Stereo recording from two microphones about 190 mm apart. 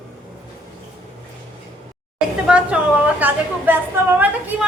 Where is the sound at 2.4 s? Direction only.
5° right (ahead or behind).